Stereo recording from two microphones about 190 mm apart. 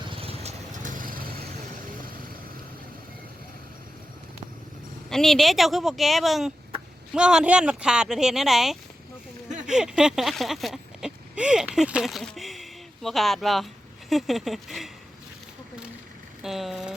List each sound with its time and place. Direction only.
0.0 s vehicle: 30° right (ahead or behind); by 1.5 s 50° right (ahead or behind)
5.0 s speech: centre (ahead or behind)
9.6 s a sound: 5° right (ahead or behind)
14.1 s speech: centre (ahead or behind)
16.4 s speech: centre (ahead or behind)